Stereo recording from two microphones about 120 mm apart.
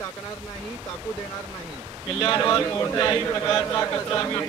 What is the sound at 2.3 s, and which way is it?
A man's voice, 25° left (ahead or behind).